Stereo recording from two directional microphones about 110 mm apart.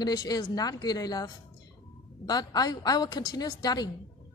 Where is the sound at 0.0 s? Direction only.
40° left (ahead or behind).